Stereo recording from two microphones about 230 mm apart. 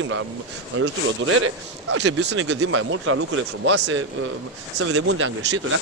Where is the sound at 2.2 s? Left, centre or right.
Right.